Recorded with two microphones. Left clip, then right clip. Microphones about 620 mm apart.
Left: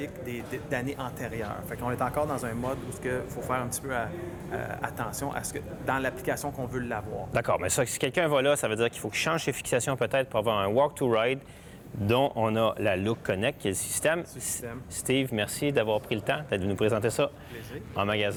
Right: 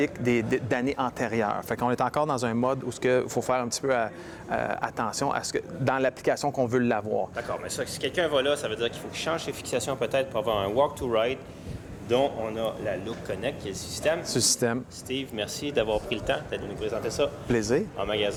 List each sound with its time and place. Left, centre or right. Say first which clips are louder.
0.0 s speech: right 11 dB; right
7.3 s speech: left 5 dB; left
9.2 s speech: even; left
12.0 s speech: even; left
14.3 s speech: right 13 dB; right
15.0 s speech: left 6 dB; left
15.6 s speech: even; left
16.8 s speech: left 1 dB; left